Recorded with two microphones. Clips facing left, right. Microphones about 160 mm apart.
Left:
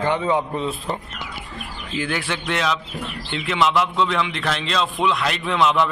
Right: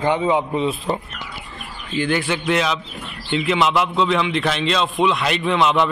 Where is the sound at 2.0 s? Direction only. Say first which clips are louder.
Right 6 dB; centre (ahead or behind).